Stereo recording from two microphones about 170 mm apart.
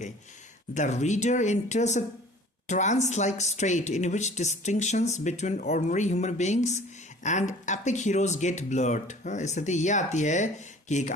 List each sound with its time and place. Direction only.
0.7 s speech: 45° left (ahead or behind)